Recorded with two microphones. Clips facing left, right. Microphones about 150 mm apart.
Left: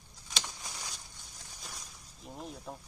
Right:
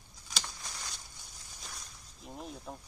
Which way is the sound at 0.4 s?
10° left (ahead or behind).